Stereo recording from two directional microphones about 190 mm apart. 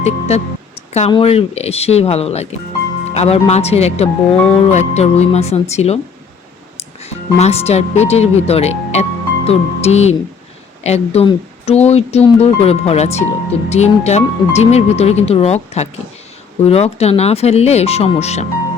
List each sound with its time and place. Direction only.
0.0 s speech: 35° left (ahead or behind)
7.0 s speech: 35° left (ahead or behind)